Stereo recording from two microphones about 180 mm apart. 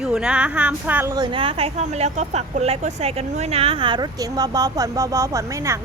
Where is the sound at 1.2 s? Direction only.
30° right (ahead or behind).